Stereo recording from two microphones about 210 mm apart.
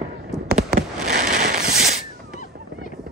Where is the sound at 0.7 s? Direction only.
45° right (ahead or behind).